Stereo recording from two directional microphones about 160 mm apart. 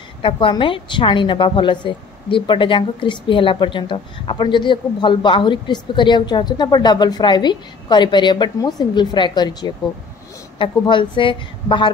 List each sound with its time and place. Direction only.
0.2 s a woman's voice: 30° left (ahead or behind)